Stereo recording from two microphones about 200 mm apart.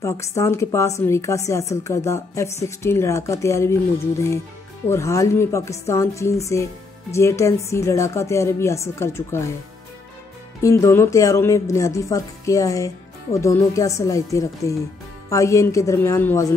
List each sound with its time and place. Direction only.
0.0 s speech: 15° left (ahead or behind)
4.8 s speech: 15° left (ahead or behind)
10.6 s speech: 15° left (ahead or behind)